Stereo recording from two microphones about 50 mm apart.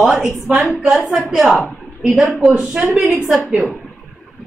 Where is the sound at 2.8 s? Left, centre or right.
Centre.